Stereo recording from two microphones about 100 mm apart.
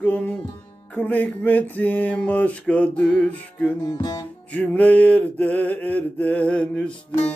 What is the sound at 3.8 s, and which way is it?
Music, 45° left (ahead or behind).